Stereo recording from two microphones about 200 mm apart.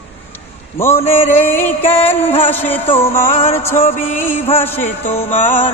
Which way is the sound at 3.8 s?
35° left (ahead or behind).